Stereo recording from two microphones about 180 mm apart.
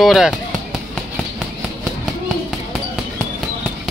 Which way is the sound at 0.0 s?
Centre (ahead or behind).